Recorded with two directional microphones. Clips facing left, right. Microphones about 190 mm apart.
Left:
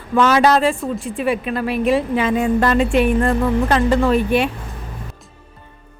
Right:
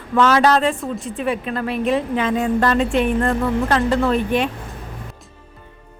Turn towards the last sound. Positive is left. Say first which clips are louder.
# left 2 dB
turn(degrees=10)  # may be behind; listen again after turning